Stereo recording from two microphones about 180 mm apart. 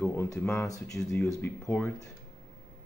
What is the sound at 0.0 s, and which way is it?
Speech, 15° left (ahead or behind).